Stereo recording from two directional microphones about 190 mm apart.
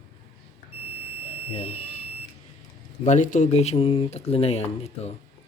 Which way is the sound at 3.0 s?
40° left (ahead or behind).